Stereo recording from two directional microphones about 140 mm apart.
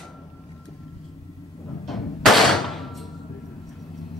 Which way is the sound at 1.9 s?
Centre (ahead or behind).